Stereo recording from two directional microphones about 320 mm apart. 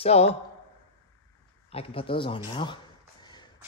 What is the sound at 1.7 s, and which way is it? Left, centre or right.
Speech, centre.